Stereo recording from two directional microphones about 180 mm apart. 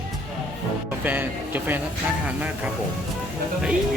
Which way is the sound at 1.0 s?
10° right (ahead or behind).